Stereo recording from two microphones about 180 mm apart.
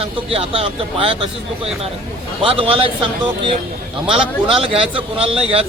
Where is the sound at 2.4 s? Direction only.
30° right (ahead or behind).